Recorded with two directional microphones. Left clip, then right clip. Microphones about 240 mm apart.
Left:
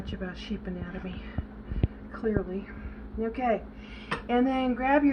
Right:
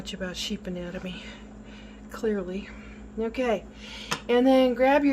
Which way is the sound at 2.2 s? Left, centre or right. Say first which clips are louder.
Right 2 dB; right.